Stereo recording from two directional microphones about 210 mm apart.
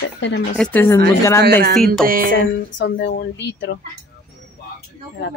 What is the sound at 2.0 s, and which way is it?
Music, 40° right (ahead or behind).